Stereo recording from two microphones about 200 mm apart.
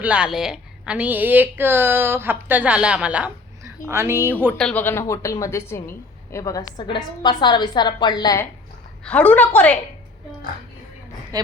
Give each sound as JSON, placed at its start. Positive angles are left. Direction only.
{"t": 0.0, "sound": "a woman's voice", "side_deg": -5}
{"t": 4.5, "sound": "a woman's voice", "side_deg": 5}
{"t": 9.0, "sound": "a woman's voice", "side_deg": 5}
{"t": 11.3, "sound": "a woman's voice", "side_deg": -20}